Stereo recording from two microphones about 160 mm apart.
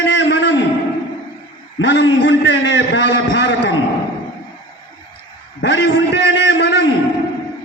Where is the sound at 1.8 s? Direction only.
90° left.